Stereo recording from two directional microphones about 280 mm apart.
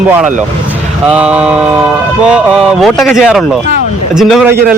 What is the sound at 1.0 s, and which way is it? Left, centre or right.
Speech, centre.